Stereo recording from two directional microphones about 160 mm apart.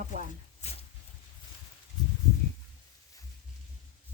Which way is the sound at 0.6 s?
45° left (ahead or behind).